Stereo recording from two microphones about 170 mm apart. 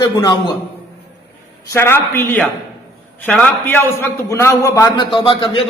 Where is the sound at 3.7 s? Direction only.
15° left (ahead or behind).